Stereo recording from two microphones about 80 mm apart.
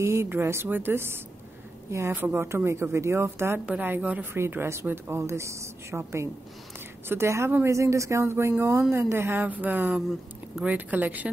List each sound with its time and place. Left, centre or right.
0.0 s a woman's voice: right
2.1 s a woman's voice: right
2.4 s a woman's voice: right